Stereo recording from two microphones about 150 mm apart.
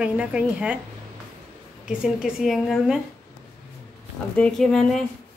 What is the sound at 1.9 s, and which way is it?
A woman's voice, 5° right (ahead or behind).